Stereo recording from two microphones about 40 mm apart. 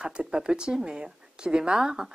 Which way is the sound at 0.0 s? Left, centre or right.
Right.